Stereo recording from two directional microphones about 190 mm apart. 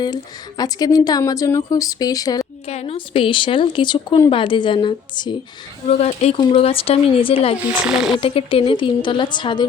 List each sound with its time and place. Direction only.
0.0 s speech: 20° left (ahead or behind)
2.6 s speech: 30° left (ahead or behind)
5.9 s speech: 35° left (ahead or behind)
7.7 s speech: 5° right (ahead or behind)
8.2 s speech: 30° left (ahead or behind)